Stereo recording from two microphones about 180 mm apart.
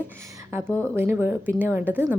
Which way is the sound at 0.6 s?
5° left (ahead or behind).